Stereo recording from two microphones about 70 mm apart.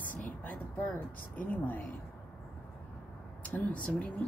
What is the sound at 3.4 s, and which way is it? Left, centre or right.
Speech, left.